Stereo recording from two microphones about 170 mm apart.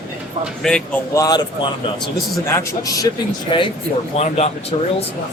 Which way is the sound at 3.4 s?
30° left (ahead or behind).